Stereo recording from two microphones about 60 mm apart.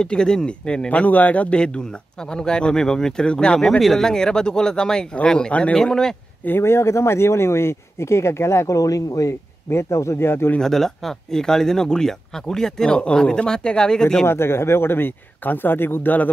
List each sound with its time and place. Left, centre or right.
0.0 s speech: centre
6.4 s speech: left
9.7 s speech: left
10.6 s speech: centre
14.2 s speech: left